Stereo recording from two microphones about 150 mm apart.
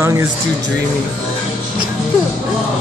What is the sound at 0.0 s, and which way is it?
Speech, 20° right (ahead or behind).